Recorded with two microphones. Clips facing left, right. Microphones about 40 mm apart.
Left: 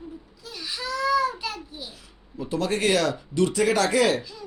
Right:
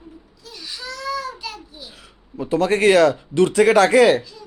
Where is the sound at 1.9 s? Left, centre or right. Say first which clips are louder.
Right 5 dB; right.